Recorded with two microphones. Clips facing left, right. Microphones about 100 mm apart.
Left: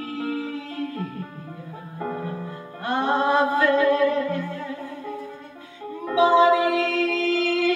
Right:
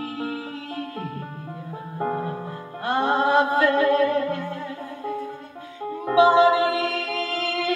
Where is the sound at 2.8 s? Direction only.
35° right (ahead or behind).